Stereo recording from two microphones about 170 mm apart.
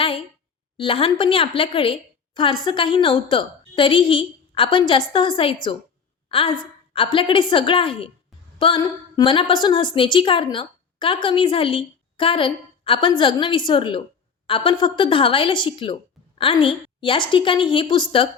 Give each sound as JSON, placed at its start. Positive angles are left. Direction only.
{"t": 0.8, "sound": "a woman's voice", "side_deg": 30}